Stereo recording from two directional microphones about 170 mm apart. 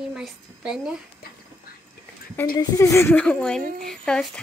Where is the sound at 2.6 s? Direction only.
20° left (ahead or behind).